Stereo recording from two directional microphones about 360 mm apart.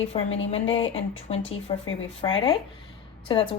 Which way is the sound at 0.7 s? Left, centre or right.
Centre.